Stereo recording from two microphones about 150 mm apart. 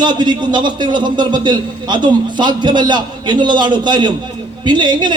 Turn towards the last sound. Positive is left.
turn(degrees=-30)  # may be behind; listen again after turning